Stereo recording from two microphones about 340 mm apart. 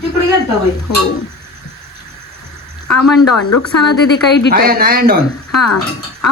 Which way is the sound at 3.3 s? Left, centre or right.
Left.